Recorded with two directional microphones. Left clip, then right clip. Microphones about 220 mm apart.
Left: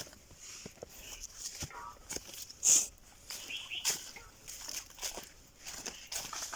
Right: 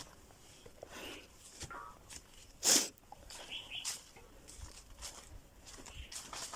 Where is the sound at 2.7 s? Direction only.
35° right (ahead or behind).